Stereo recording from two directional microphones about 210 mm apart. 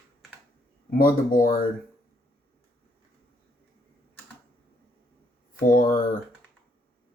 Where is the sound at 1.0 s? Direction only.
40° left (ahead or behind).